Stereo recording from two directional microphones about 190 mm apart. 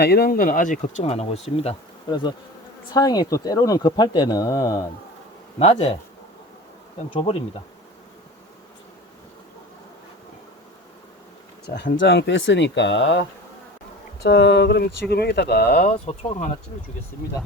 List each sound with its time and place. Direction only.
0.0 s speech: 60° left (ahead or behind); by 4.9 s 20° left (ahead or behind)
5.5 s speech: 35° left (ahead or behind)
7.1 s speech: 30° left (ahead or behind)
11.7 s speech: 65° left (ahead or behind)
15.8 s speech: 35° left (ahead or behind)